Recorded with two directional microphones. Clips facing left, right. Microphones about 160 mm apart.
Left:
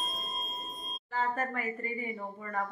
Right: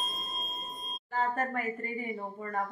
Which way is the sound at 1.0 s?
45° right (ahead or behind).